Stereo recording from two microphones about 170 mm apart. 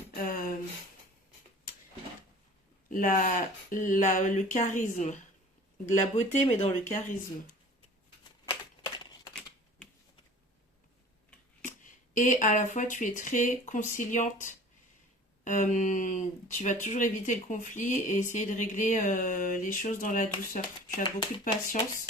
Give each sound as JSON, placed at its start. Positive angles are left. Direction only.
{"t": 0.1, "sound": "a sound", "side_deg": 55}
{"t": 2.9, "sound": "speech", "side_deg": 50}
{"t": 8.4, "sound": "a sound", "side_deg": 25}
{"t": 9.3, "sound": "typing", "side_deg": 5}
{"t": 11.6, "sound": "speech", "side_deg": 50}
{"t": 21.0, "sound": "speech", "side_deg": 25}